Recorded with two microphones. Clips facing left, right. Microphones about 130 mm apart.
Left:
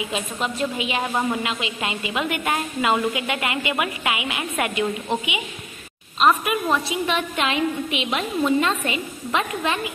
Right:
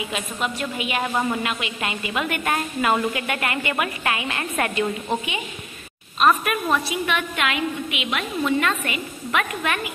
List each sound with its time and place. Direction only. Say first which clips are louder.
0.1 s a woman's voice: left 1 dB; 25° left (ahead or behind)
1.0 s a woman's voice: right 1 dB; 10° left (ahead or behind)
1.5 s a woman's voice: left 1 dB; 20° left (ahead or behind)
6.1 s a woman's voice: even; 20° left (ahead or behind)
7.1 s a woman's voice: left 2 dB; 30° left (ahead or behind)